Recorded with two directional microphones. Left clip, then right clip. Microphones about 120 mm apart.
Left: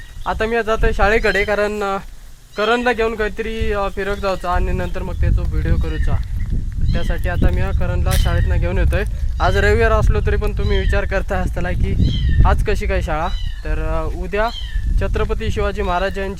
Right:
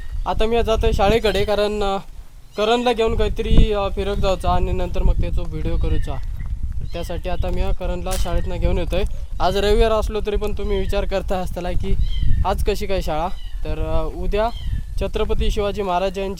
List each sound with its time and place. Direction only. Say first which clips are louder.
0.3 s speech: left 1 dB; 30° right (ahead or behind)
9.4 s speech: left 2 dB; 20° right (ahead or behind)